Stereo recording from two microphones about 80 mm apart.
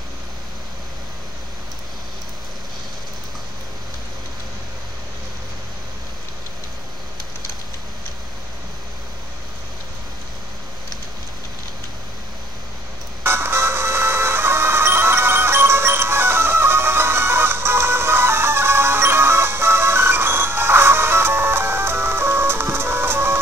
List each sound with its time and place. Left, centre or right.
13.2 s music: right